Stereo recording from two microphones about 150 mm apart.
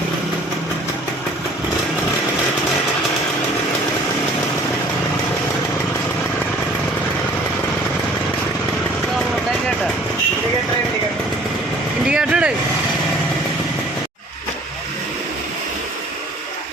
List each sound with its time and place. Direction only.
12.0 s vehicle: 5° right (ahead or behind)